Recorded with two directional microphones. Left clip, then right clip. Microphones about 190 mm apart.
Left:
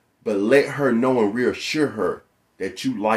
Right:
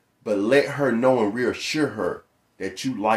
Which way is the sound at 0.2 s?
5° left (ahead or behind).